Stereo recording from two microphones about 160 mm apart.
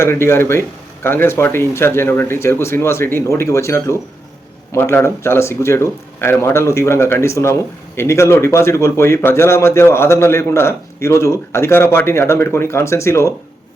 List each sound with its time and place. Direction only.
0.0 s a man's voice: 15° left (ahead or behind)